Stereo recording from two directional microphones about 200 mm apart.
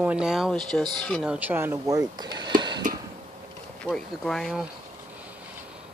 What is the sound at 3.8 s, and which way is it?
Speech, centre (ahead or behind).